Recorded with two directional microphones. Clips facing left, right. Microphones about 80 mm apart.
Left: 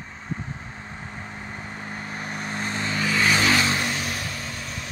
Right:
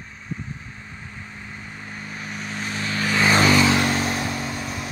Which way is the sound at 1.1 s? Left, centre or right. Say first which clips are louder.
Left 2 dB; left.